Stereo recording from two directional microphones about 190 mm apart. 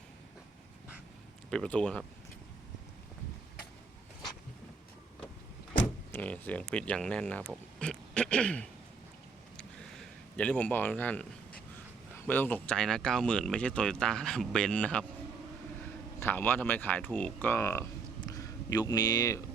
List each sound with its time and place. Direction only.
1.5 s speech: 5° left (ahead or behind)
5.8 s speech: 10° left (ahead or behind)
9.6 s a sound: 5° left (ahead or behind)
12.1 s speech: 10° left (ahead or behind)
16.2 s speech: 10° left (ahead or behind)
18.3 s a sound: 20° left (ahead or behind)